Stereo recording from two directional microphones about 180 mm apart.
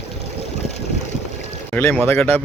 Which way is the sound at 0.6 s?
40° left (ahead or behind).